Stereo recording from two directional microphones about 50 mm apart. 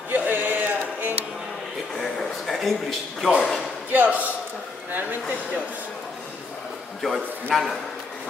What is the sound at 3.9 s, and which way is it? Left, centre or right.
Music, right.